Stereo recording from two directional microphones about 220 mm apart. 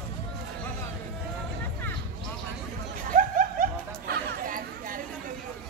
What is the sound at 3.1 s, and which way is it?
Chatter, 35° right (ahead or behind).